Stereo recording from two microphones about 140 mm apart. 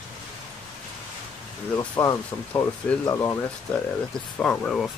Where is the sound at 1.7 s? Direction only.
20° left (ahead or behind).